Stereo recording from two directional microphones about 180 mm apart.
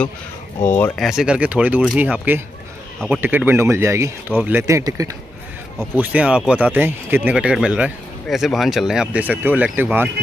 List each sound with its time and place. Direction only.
0.6 s speech: 10° left (ahead or behind)
1.0 s speech: 5° right (ahead or behind)
5.9 s speech: 5° right (ahead or behind)